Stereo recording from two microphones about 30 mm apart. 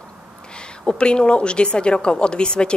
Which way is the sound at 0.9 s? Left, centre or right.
Left.